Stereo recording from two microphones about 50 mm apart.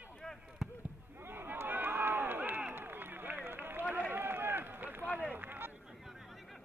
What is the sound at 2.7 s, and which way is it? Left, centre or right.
Run, right.